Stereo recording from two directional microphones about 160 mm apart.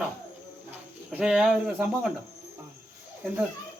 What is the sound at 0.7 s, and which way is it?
Speech, 5° right (ahead or behind).